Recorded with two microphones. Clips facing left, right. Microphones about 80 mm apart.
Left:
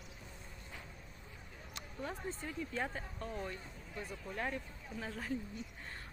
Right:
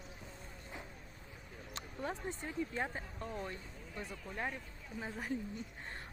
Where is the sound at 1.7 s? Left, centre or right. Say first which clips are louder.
Right 2 dB; right.